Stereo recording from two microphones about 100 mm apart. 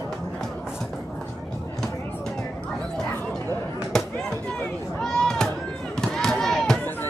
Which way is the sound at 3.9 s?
5° left (ahead or behind).